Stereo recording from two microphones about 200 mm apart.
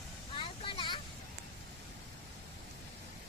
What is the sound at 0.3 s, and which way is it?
Vehicle, 25° left (ahead or behind).